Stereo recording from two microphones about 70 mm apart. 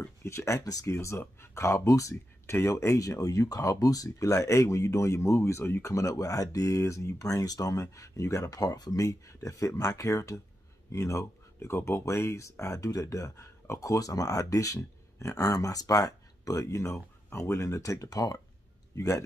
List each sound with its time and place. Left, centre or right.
0.2 s speech: left
0.6 s speech: left
0.8 s speech: left
2.4 s speech: left
9.0 s speech: left
18.9 s speech: left